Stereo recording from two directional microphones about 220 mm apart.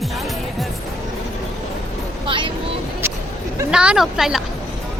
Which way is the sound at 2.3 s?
25° right (ahead or behind).